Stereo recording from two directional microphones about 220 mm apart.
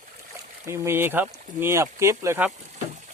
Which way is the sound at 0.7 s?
10° right (ahead or behind).